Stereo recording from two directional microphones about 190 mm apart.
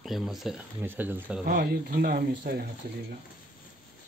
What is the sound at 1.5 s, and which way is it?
Speech, 50° right (ahead or behind).